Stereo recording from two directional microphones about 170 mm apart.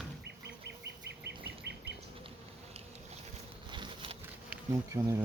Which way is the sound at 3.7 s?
30° right (ahead or behind).